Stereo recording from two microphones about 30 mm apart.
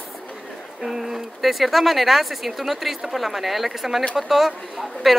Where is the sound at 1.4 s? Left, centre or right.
Centre.